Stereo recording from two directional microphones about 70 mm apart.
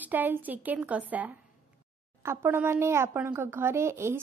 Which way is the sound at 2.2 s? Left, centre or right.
Right.